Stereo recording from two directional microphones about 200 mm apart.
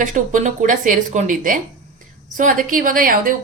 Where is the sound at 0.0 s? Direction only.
40° right (ahead or behind).